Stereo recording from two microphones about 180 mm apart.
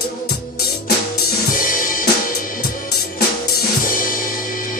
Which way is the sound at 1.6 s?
50° left (ahead or behind).